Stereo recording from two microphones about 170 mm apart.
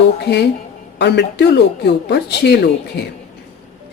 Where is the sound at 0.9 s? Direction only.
85° left.